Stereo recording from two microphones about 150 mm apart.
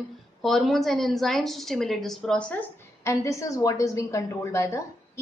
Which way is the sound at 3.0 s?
20° left (ahead or behind).